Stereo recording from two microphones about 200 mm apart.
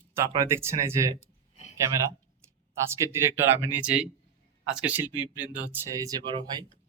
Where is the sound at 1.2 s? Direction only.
35° left (ahead or behind).